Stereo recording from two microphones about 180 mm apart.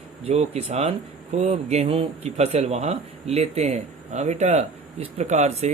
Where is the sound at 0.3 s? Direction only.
35° right (ahead or behind).